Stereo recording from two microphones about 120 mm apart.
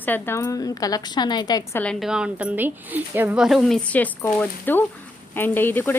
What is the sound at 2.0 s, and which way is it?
Speech, 5° right (ahead or behind).